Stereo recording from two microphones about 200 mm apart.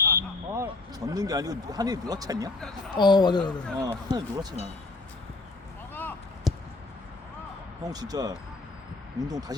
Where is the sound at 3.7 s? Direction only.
20° right (ahead or behind).